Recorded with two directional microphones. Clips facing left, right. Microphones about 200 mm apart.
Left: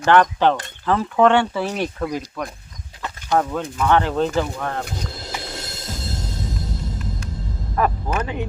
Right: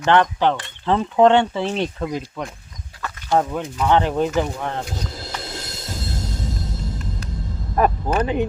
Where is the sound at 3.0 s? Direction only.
20° left (ahead or behind).